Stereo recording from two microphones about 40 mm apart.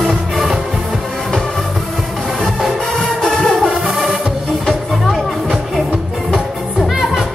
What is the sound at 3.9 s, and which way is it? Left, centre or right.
Music, centre.